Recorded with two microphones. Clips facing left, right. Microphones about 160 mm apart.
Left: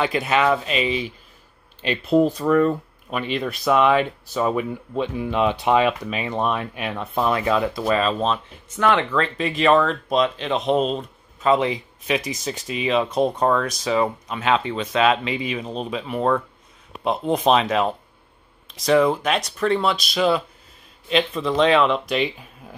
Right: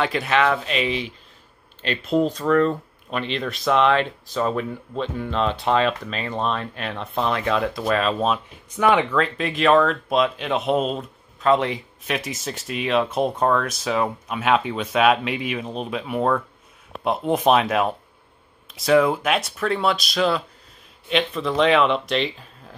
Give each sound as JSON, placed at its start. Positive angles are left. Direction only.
{"t": 0.0, "sound": "speech", "side_deg": 5}